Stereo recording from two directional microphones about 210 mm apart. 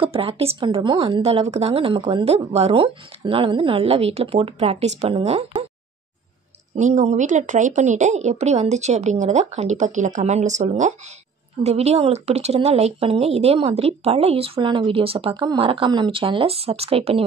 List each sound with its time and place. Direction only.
0.0 s a woman's voice: 25° right (ahead or behind)
6.8 s a woman's voice: 35° right (ahead or behind)